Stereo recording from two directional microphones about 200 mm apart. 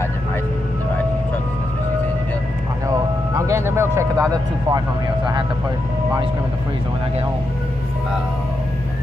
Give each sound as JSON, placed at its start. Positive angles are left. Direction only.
{"t": 3.3, "sound": "speech", "side_deg": -15}